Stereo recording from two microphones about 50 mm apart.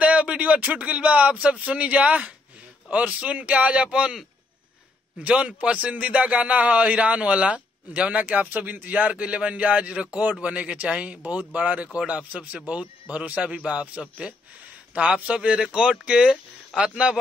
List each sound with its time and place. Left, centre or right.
0.0 s a sound: right
1.4 s a man's voice: right
5.2 s a man's voice: right